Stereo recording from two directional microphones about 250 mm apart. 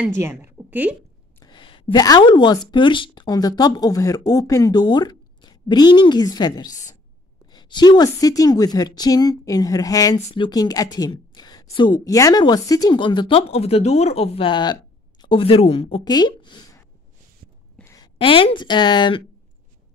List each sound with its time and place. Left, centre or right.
0.0 s a woman's voice: centre
1.4 s a sound: centre
2.7 s a woman's voice: centre